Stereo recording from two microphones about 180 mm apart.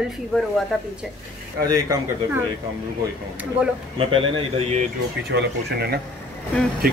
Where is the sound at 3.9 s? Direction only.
30° right (ahead or behind).